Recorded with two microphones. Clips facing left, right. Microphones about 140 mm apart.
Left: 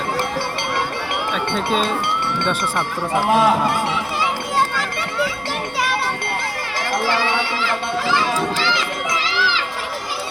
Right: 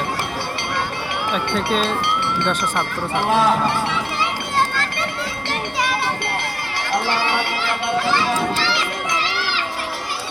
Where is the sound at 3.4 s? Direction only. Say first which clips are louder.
Left 1 dB; 10° left (ahead or behind).